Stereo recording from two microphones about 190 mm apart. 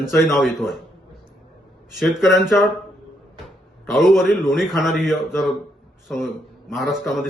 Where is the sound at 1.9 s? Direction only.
Centre (ahead or behind).